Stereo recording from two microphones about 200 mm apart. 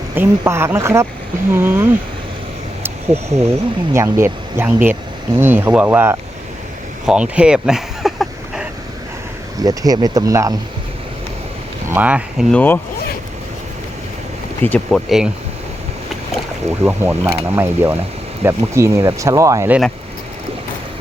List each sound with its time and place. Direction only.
0.2 s speech: 10° right (ahead or behind)
7.0 s a sound: 5° right (ahead or behind)
9.6 s speech: 20° right (ahead or behind)
11.9 s speech: 10° right (ahead or behind)
14.6 s speech: 5° left (ahead or behind)
16.8 s speech: 10° right (ahead or behind)